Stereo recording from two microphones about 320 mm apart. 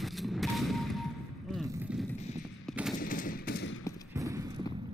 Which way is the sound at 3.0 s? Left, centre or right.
Left.